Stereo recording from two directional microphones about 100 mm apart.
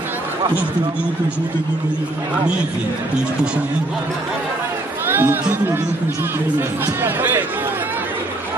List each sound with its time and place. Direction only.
5.0 s speech: 20° right (ahead or behind)
7.0 s speech: 20° right (ahead or behind)